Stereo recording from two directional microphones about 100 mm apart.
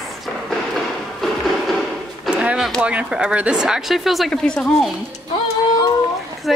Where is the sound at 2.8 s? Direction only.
10° right (ahead or behind); by 4.9 s 10° left (ahead or behind).